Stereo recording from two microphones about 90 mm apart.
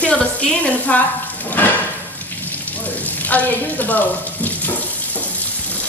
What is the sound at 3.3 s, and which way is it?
Speech, 20° left (ahead or behind).